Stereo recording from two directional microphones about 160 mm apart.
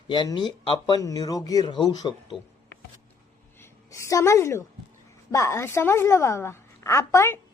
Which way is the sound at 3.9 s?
20° left (ahead or behind).